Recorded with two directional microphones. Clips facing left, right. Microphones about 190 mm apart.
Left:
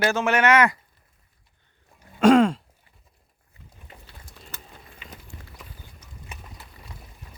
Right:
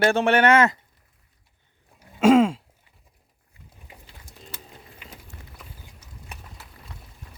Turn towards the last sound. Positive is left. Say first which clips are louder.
# left 1 dB
turn(degrees=0)  # may be behind; listen again after turning